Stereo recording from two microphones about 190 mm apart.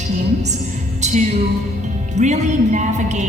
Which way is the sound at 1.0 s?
40° right (ahead or behind).